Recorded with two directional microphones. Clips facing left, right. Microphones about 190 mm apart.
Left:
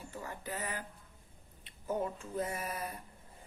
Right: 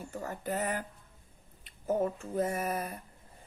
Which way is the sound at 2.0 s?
45° right (ahead or behind).